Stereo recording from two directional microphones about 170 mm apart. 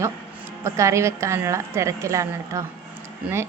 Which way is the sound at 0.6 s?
15° right (ahead or behind).